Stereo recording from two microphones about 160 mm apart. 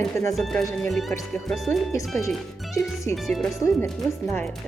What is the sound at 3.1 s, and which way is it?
Speech, centre (ahead or behind).